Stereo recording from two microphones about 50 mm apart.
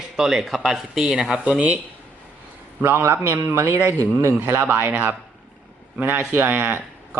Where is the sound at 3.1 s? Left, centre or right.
Right.